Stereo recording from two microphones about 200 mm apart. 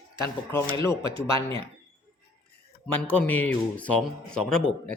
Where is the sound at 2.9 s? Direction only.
10° left (ahead or behind).